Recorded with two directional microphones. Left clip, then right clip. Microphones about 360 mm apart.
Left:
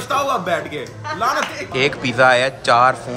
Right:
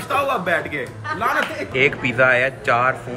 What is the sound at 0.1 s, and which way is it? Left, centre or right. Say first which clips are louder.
Speech: left 1 dB; centre.